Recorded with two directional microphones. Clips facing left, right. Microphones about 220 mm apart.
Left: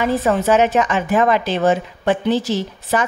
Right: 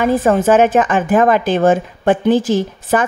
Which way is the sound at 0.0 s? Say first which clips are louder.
Right 4 dB; 50° right (ahead or behind).